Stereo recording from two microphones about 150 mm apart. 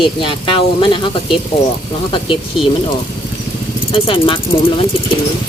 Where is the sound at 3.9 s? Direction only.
35° left (ahead or behind).